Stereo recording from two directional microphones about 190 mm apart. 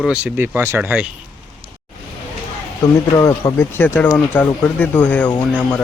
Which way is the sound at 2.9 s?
15° left (ahead or behind).